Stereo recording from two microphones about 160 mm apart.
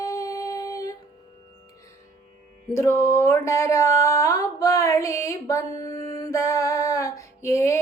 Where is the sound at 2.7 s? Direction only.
15° left (ahead or behind).